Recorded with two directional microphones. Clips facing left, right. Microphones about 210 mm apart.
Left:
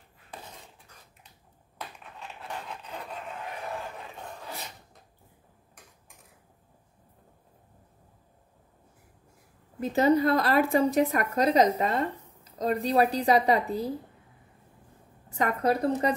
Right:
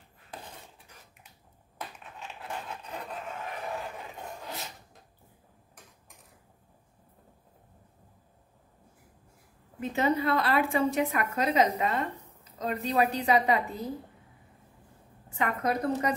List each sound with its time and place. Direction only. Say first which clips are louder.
2.1 s a sound: even; centre (ahead or behind)
9.8 s a woman's voice: left 5 dB; 40° left (ahead or behind)
15.2 s a woman's voice: left 4 dB; 40° left (ahead or behind)